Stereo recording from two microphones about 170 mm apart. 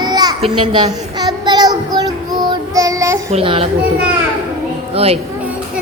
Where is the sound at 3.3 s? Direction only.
35° right (ahead or behind).